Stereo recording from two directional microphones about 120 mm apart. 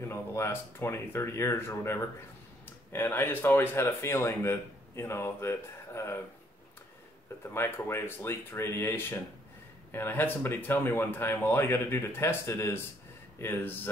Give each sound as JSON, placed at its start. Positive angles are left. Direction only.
{"t": 0.0, "sound": "speech", "side_deg": 20}
{"t": 7.4, "sound": "speech", "side_deg": 20}